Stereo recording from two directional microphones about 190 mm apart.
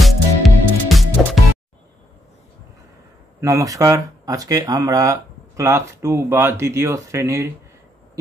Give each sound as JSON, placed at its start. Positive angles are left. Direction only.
{"t": 0.0, "sound": "music", "side_deg": 0}
{"t": 3.3, "sound": "speech", "side_deg": -15}